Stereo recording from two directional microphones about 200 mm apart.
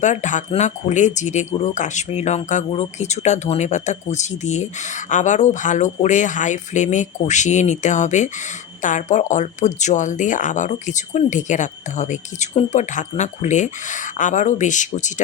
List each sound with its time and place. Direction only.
0.0 s speech: 35° left (ahead or behind)